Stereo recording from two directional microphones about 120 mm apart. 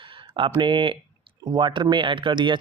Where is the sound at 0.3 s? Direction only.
45° right (ahead or behind).